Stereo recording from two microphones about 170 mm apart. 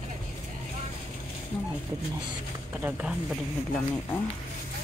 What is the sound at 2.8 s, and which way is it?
Speech, 10° right (ahead or behind).